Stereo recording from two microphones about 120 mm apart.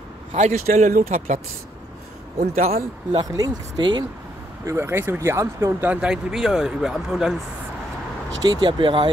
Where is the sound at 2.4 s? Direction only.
60° right (ahead or behind).